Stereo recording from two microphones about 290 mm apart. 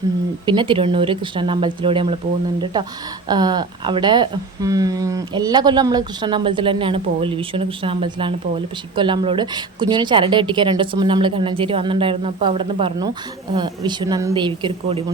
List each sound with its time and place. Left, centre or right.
0.4 s speech: centre
3.2 s speech: centre